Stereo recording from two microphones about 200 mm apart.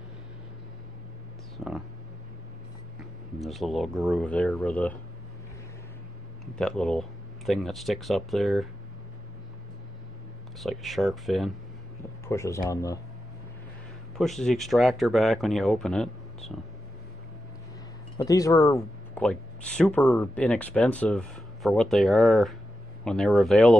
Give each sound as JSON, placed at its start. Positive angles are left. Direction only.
{"t": 1.6, "sound": "a sound", "side_deg": 0}
{"t": 3.3, "sound": "speech", "side_deg": 0}
{"t": 6.4, "sound": "speech", "side_deg": 0}
{"t": 10.6, "sound": "speech", "side_deg": 0}
{"t": 12.3, "sound": "speech", "side_deg": 15}
{"t": 14.1, "sound": "speech", "side_deg": 0}
{"t": 18.1, "sound": "speech", "side_deg": 15}